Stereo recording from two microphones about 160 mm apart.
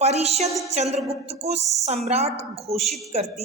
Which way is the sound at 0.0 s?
40° right (ahead or behind).